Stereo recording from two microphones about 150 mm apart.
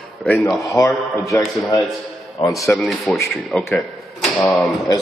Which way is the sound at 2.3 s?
25° left (ahead or behind).